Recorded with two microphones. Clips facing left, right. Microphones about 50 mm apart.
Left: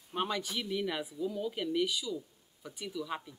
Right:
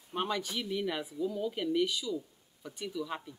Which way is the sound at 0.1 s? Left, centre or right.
Centre.